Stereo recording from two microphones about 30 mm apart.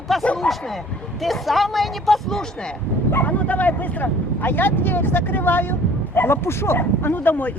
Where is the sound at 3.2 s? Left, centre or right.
Left.